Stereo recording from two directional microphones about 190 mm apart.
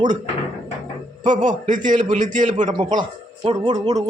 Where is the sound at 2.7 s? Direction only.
25° right (ahead or behind).